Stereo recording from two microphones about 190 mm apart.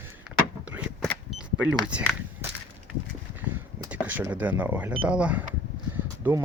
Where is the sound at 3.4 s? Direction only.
15° right (ahead or behind).